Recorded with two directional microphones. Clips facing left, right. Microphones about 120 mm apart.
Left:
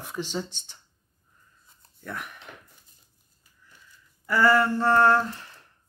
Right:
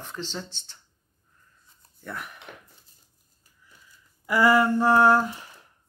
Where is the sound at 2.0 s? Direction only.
Centre (ahead or behind).